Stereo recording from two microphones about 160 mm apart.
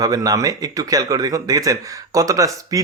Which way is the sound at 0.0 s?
20° right (ahead or behind).